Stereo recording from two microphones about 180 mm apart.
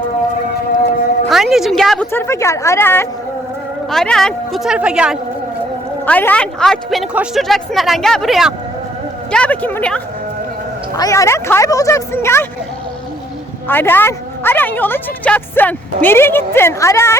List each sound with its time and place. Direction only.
1.3 s a woman's voice: centre (ahead or behind)
2.1 s a woman's voice: 15° left (ahead or behind); by 5.1 s 5° right (ahead or behind)
6.1 s a woman's voice: 10° left (ahead or behind)
10.9 s a woman's voice: 20° left (ahead or behind)
13.7 s a woman's voice: 10° left (ahead or behind)